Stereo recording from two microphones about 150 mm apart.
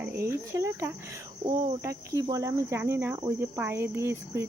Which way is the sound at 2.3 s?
20° right (ahead or behind).